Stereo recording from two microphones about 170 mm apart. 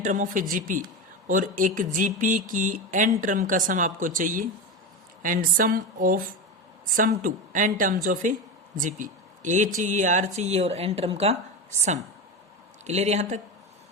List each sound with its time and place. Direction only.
0.0 s speech: 50° right (ahead or behind)
12.8 s speech: 40° right (ahead or behind)